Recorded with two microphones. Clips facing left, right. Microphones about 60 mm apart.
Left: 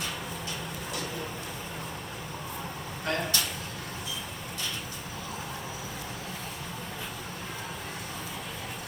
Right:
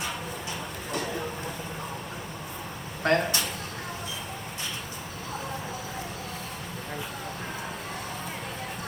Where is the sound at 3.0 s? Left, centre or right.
Right.